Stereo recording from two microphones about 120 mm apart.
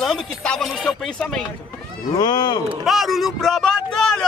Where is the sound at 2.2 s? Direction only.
35° left (ahead or behind).